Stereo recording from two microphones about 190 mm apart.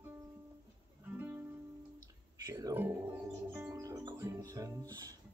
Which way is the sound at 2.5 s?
15° right (ahead or behind).